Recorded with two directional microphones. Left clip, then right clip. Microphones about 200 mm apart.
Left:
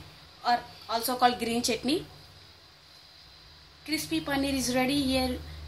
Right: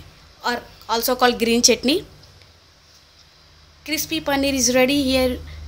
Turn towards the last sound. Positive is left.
turn(degrees=-50)  # may be behind; listen again after turning